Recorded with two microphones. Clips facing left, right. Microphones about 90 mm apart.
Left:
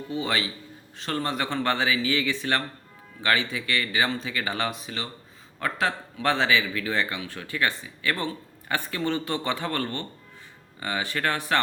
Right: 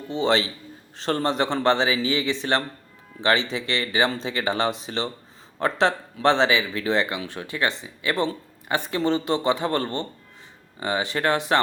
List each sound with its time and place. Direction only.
0.1 s speech: 30° right (ahead or behind)